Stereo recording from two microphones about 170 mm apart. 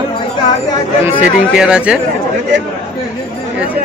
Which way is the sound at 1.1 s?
10° right (ahead or behind).